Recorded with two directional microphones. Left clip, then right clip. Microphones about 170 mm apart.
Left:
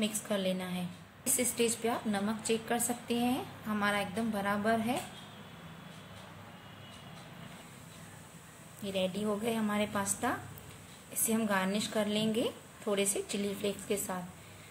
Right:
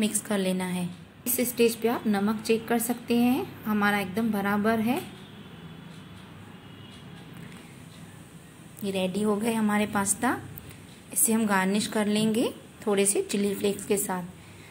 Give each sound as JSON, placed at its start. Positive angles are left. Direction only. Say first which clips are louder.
{"t": 0.0, "sound": "a woman's voice", "louder": "right 5 dB", "side_deg": -5}
{"t": 8.8, "sound": "a woman's voice", "louder": "right 6 dB", "side_deg": -5}